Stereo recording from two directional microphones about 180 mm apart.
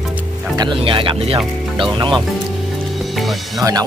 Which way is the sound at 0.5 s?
25° right (ahead or behind).